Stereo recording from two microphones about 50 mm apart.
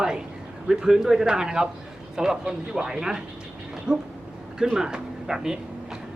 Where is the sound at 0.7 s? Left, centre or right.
Centre.